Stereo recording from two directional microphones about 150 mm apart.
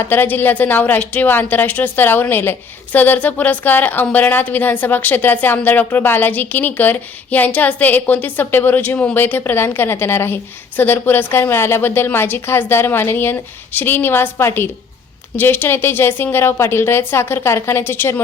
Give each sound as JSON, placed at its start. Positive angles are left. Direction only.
{"t": 0.0, "sound": "a woman's voice", "side_deg": 15}